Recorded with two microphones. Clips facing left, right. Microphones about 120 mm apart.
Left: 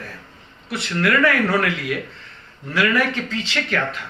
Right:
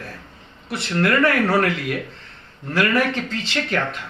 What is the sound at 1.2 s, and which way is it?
Speech, 45° right (ahead or behind).